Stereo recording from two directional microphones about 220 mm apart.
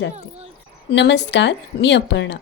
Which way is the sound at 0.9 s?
50° left (ahead or behind).